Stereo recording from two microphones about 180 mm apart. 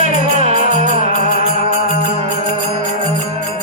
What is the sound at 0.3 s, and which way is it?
Music, 40° right (ahead or behind).